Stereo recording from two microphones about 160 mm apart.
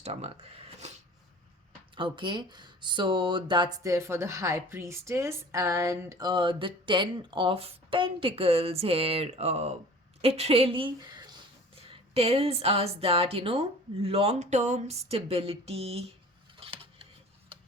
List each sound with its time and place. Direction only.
0.0 s speech: 40° right (ahead or behind)
2.0 s speech: 30° right (ahead or behind)
16.6 s a sound: 35° right (ahead or behind)
17.5 s tick-tock: 35° right (ahead or behind)